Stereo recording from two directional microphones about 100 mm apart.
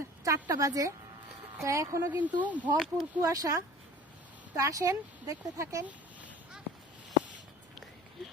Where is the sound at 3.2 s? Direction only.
35° right (ahead or behind).